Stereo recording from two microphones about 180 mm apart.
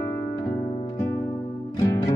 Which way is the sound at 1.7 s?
20° left (ahead or behind).